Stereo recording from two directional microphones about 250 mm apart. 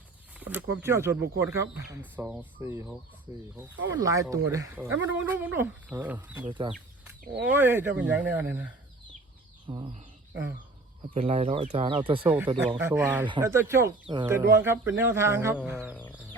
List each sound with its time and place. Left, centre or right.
0.3 s speech: centre
6.5 s speech: centre
7.5 s speech: centre
9.6 s speech: right
11.1 s speech: right
12.7 s speech: centre